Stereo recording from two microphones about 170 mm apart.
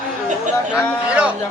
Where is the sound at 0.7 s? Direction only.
5° right (ahead or behind).